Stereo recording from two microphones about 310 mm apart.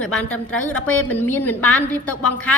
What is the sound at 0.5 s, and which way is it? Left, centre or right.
Speech, left.